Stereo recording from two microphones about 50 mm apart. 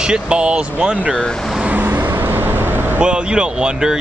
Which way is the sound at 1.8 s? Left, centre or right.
Right.